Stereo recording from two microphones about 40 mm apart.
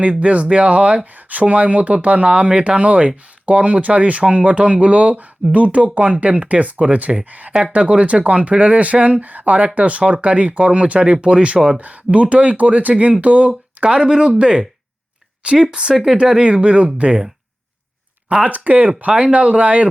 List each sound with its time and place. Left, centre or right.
0.0 s speech: right
11.8 s speech: right
13.8 s speech: right
16.4 s speech: right
18.4 s speech: right